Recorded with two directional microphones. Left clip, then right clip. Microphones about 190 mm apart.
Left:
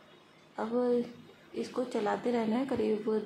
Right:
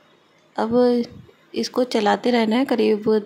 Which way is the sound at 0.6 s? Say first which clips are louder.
Right 12 dB; 50° right (ahead or behind).